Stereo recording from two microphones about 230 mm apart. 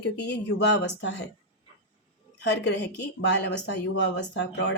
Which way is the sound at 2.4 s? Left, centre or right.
Left.